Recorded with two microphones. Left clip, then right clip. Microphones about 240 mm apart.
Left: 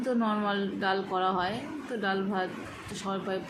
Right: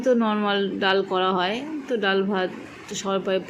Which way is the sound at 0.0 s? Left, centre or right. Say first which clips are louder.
Right 8 dB; centre.